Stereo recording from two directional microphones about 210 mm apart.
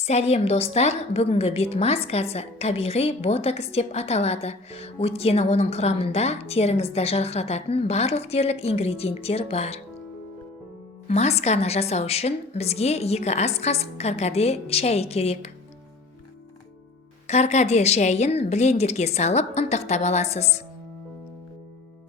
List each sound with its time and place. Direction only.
0.0 s a woman's voice: 30° left (ahead or behind)
11.1 s a woman's voice: 30° left (ahead or behind)
17.2 s a woman's voice: 30° left (ahead or behind)